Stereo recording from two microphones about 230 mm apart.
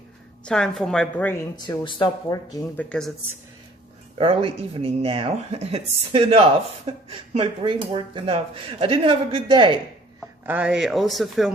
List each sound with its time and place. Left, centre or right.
0.4 s speech: centre
4.2 s speech: right
10.2 s speech: centre